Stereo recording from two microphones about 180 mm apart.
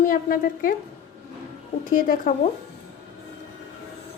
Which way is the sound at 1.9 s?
50° left (ahead or behind).